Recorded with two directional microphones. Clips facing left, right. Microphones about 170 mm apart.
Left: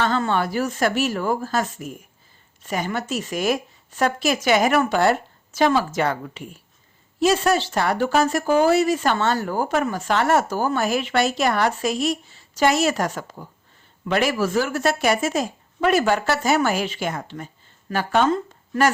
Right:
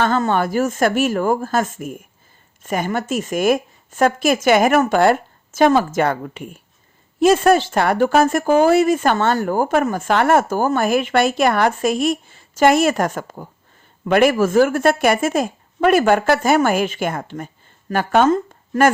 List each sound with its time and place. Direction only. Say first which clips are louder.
0.0 s a woman's voice: right 4 dB; 45° right (ahead or behind)